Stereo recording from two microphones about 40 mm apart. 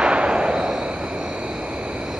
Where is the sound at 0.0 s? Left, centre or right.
Right.